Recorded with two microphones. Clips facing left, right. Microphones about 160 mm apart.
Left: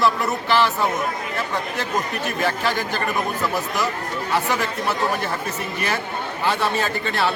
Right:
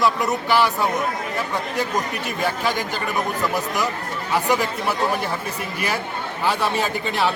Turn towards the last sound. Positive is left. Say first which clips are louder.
# right 1 dB
turn(degrees=-15)  # may be behind; listen again after turning